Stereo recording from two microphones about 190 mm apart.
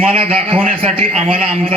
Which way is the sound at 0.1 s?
30° right (ahead or behind).